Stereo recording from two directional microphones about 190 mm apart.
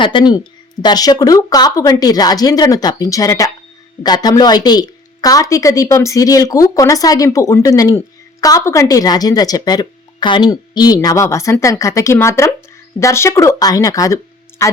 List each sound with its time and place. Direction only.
0.0 s speech: 25° left (ahead or behind)